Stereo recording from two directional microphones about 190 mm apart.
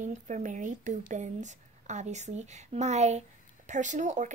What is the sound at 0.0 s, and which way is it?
Speech, 40° right (ahead or behind).